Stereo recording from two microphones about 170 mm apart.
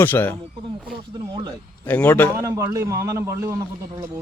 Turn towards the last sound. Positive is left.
turn(degrees=-15)  # may be behind; listen again after turning